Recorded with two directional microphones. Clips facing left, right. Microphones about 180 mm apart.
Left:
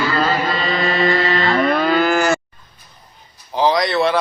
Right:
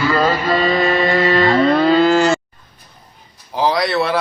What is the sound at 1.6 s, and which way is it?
Moo, 30° right (ahead or behind).